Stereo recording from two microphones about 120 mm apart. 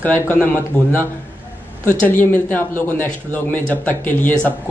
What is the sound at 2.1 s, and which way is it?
Speech, 15° left (ahead or behind).